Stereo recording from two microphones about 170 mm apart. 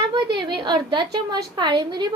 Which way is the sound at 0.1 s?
25° right (ahead or behind).